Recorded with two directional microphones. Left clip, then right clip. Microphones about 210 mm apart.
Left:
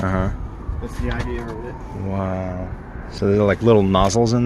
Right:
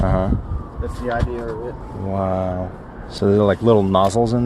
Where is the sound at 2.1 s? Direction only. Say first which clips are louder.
Right 5 dB; 5° right (ahead or behind).